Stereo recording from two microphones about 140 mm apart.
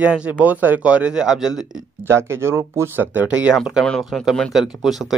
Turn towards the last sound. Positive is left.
turn(degrees=0)  # may be behind; listen again after turning